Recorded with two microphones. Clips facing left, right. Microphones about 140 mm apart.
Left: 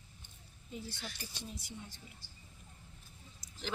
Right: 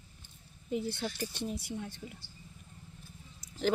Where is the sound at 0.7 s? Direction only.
65° right (ahead or behind).